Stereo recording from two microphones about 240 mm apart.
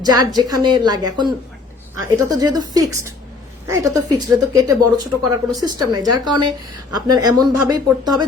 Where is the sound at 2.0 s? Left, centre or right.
Centre.